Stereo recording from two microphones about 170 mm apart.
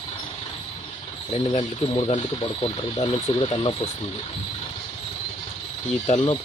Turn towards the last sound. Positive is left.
turn(degrees=30)  # may be behind; listen again after turning